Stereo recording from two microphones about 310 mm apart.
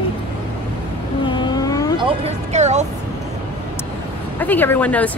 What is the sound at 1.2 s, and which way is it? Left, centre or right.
Vehicle, centre.